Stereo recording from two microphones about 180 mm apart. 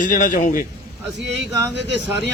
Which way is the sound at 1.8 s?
80° right.